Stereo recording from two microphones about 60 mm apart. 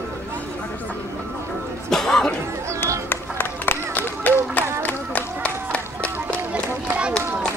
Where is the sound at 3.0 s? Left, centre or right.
Left.